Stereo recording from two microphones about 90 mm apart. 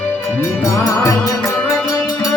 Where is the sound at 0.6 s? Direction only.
40° left (ahead or behind).